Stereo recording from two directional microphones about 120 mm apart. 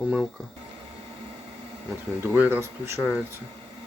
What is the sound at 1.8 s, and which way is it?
Speech, 20° right (ahead or behind).